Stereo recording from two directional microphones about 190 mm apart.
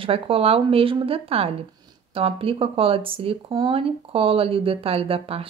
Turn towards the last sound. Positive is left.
turn(degrees=-30)  # may be behind; listen again after turning